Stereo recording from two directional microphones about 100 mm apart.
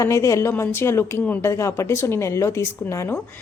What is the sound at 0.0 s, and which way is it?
A woman's voice, 30° left (ahead or behind).